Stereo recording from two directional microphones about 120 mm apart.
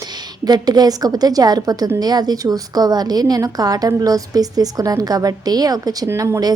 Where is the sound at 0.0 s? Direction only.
35° right (ahead or behind).